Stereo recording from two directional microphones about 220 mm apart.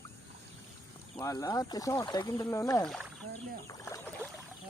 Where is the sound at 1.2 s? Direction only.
15° left (ahead or behind).